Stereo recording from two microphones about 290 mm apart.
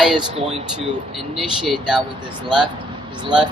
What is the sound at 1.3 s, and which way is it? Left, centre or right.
Speech, centre.